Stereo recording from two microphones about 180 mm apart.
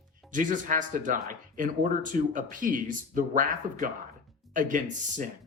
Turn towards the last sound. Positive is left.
turn(degrees=-45)  # may be behind; listen again after turning